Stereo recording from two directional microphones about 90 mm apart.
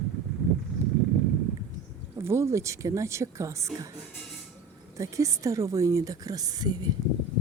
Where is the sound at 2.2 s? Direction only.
30° right (ahead or behind).